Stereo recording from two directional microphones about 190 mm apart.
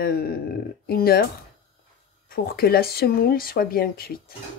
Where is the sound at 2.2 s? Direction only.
50° left (ahead or behind).